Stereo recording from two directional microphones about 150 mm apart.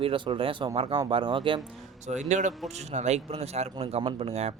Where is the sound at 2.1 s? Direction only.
55° right (ahead or behind).